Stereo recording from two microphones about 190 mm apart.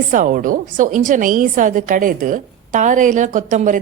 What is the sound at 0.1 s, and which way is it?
A woman's voice, 45° right (ahead or behind).